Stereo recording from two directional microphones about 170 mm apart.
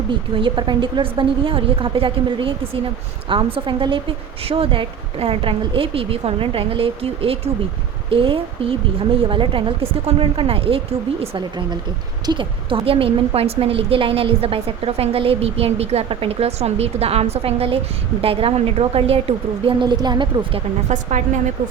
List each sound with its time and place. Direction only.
0.1 s a woman's voice: 30° right (ahead or behind)
20.9 s a woman's voice: 45° right (ahead or behind)